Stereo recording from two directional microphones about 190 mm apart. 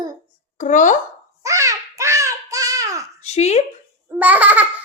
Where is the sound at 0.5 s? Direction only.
40° left (ahead or behind).